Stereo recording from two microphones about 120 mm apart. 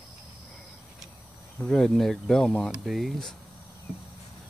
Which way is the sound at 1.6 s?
5° left (ahead or behind).